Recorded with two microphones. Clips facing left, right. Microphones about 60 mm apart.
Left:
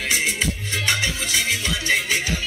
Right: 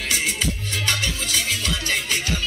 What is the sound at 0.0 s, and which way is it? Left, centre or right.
Music, left.